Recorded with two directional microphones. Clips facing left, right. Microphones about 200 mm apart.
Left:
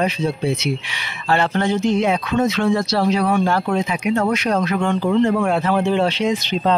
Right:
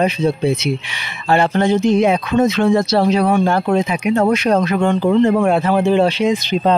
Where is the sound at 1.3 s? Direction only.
15° right (ahead or behind).